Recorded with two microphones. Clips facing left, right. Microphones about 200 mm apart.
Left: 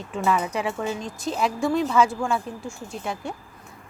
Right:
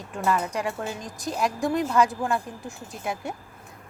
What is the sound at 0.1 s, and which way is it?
Speech, centre (ahead or behind).